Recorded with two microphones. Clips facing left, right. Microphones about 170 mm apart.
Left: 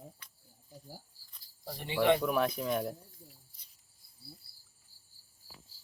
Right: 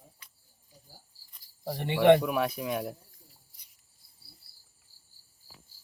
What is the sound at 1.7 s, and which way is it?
Speech, 60° right (ahead or behind).